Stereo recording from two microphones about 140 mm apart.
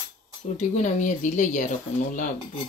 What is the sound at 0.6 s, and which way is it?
Speech, 60° left (ahead or behind).